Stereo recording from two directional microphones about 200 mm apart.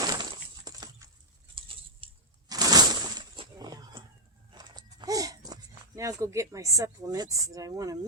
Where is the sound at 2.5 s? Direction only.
20° right (ahead or behind).